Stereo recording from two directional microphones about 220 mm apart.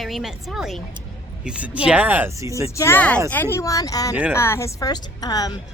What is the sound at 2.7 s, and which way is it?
Speech, 10° left (ahead or behind).